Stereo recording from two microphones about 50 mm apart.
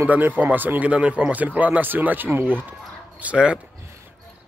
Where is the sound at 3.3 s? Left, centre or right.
Centre.